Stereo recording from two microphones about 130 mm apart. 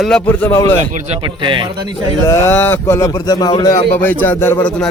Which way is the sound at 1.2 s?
40° right (ahead or behind).